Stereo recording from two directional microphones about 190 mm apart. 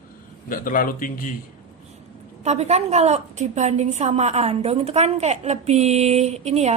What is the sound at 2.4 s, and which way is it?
A woman's voice, 35° right (ahead or behind).